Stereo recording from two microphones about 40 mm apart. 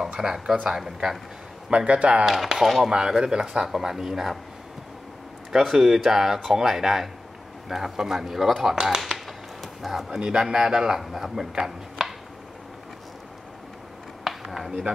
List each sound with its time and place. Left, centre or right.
0.2 s speech: centre
1.9 s speech: right
2.2 s speech: centre
2.9 s speech: centre
5.5 s speech: centre
8.8 s a sound: centre
10.4 s speech: centre
12.0 s a sound: centre
14.2 s a sound: centre